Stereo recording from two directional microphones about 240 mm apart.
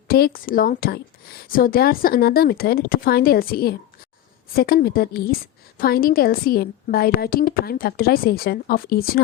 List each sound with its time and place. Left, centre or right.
0.1 s a woman's voice: left